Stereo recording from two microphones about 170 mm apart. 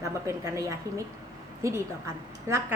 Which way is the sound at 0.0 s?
20° right (ahead or behind).